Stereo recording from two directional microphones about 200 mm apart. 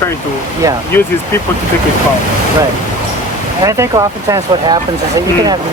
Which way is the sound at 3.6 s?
15° right (ahead or behind).